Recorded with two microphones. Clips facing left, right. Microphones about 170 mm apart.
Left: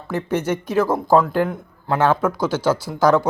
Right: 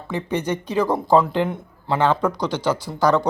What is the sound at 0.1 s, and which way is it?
Speech, 15° right (ahead or behind).